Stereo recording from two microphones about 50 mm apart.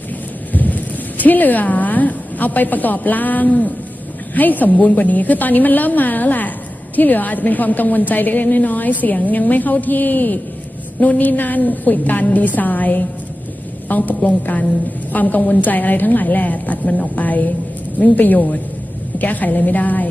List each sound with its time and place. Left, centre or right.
0.5 s a sound: left
1.2 s a woman's voice: left
4.7 s a woman's voice: left
4.9 s a woman's voice: left